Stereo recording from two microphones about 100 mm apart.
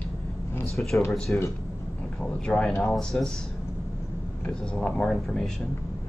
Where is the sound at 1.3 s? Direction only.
15° left (ahead or behind).